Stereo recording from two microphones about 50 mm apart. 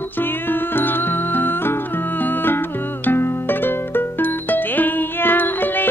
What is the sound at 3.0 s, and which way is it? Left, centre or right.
Music, left.